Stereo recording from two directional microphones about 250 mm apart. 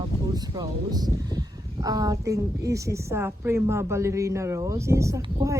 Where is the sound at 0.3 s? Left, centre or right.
Centre.